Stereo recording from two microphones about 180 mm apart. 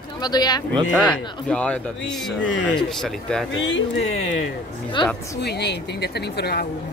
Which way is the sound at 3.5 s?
90° left.